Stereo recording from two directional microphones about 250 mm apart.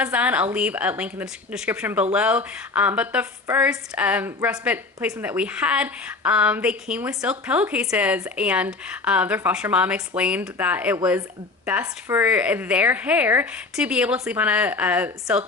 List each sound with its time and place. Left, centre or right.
0.0 s a woman's voice: centre